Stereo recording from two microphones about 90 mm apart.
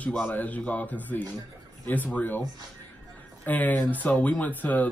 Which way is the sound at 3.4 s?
20° left (ahead or behind).